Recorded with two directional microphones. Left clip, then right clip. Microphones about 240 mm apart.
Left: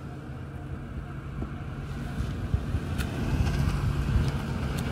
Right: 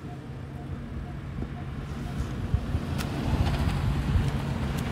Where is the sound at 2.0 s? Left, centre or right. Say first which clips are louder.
Right 1 dB; centre.